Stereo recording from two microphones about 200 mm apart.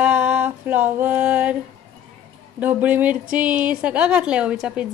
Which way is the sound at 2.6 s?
5° right (ahead or behind).